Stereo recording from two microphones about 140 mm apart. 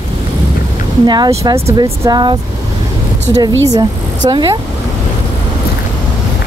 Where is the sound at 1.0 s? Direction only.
30° right (ahead or behind).